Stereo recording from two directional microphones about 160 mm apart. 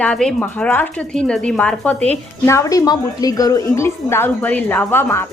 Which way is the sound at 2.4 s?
20° left (ahead or behind).